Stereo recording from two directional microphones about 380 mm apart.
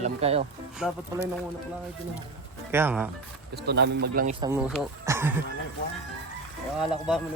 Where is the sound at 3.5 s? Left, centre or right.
Right.